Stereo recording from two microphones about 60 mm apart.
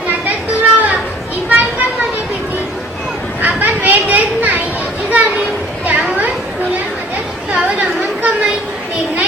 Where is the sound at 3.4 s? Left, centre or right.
Right.